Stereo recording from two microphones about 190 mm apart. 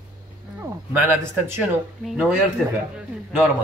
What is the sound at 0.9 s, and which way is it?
Speech, 10° right (ahead or behind).